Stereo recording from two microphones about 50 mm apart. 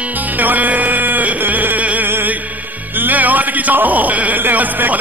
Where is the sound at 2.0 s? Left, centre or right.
Right.